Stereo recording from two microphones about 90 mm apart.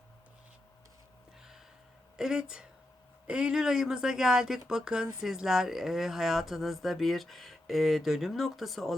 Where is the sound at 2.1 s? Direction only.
5° right (ahead or behind).